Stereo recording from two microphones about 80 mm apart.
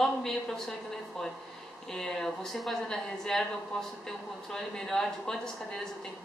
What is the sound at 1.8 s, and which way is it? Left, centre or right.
A woman's voice, centre.